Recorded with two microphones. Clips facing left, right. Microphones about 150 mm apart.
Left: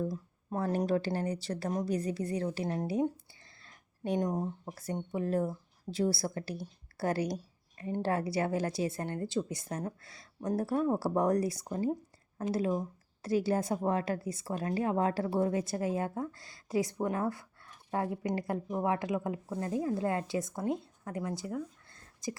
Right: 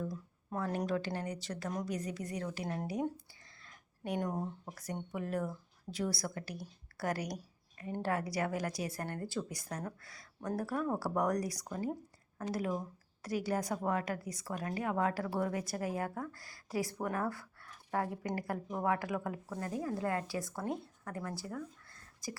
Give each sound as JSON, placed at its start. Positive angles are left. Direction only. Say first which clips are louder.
{"t": 0.0, "sound": "a woman's voice", "louder": "left 5 dB", "side_deg": 30}